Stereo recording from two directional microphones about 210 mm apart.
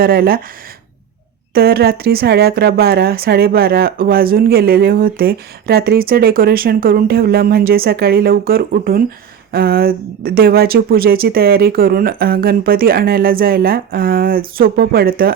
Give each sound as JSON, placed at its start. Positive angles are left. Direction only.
{"t": 0.0, "sound": "speech", "side_deg": -45}
{"t": 1.5, "sound": "speech", "side_deg": -45}